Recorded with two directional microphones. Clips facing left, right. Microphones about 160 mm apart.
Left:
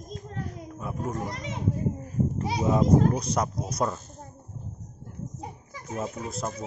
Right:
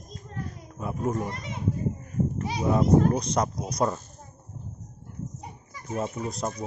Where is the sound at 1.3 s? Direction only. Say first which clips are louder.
Left 2 dB; 90° left.